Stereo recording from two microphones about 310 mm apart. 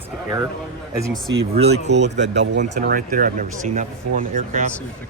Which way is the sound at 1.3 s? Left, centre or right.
Right.